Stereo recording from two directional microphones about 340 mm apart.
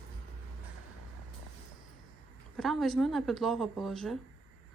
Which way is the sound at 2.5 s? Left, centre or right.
Centre.